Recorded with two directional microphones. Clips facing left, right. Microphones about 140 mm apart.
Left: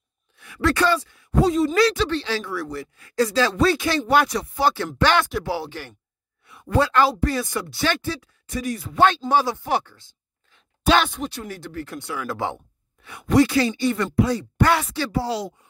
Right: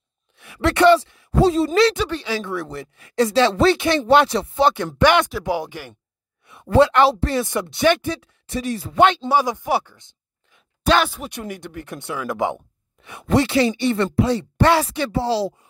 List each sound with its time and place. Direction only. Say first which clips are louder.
0.4 s speech: right 4 dB; 25° right (ahead or behind)
2.0 s speech: even; 10° right (ahead or behind)
2.4 s speech: right 1 dB; 25° right (ahead or behind)
6.4 s speech: right 6 dB; 25° right (ahead or behind)
10.9 s speech: right 1 dB; 5° right (ahead or behind)
11.2 s speech: right 1 dB; 15° right (ahead or behind)